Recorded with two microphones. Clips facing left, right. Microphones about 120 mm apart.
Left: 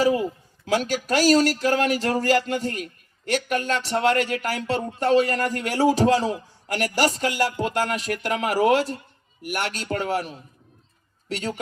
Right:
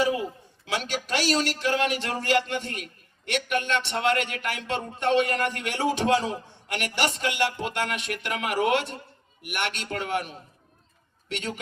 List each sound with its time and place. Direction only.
0.0 s a man's voice: 40° left (ahead or behind)